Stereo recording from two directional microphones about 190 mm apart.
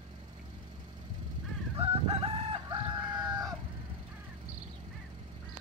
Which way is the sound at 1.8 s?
30° right (ahead or behind).